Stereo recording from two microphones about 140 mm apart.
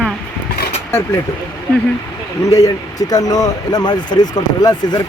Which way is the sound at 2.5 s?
25° left (ahead or behind).